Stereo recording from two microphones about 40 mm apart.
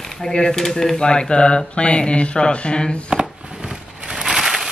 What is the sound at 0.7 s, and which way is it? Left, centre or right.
Speech, centre.